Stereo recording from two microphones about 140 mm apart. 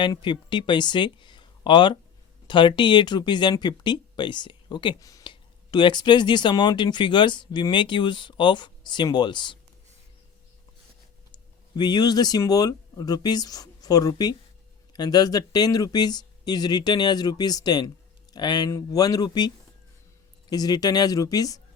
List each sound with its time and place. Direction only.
0.0 s speech: 35° left (ahead or behind)
11.8 s speech: 30° left (ahead or behind)
20.5 s speech: 30° left (ahead or behind)